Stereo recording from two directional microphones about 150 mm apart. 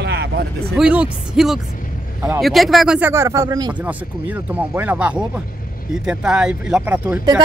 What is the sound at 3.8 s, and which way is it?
Speech, 10° right (ahead or behind).